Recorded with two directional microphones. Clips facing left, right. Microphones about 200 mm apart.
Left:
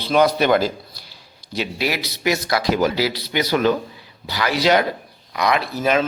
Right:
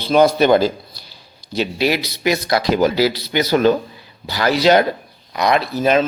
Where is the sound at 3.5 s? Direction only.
35° right (ahead or behind).